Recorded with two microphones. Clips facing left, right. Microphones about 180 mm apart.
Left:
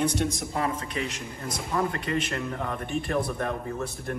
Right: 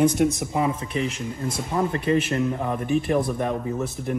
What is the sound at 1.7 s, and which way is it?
Speech, 25° right (ahead or behind).